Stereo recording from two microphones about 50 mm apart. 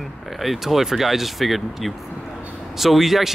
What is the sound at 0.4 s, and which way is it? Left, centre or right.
Speech, centre.